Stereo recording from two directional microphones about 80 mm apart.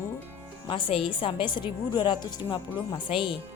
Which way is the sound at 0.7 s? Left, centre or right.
Left.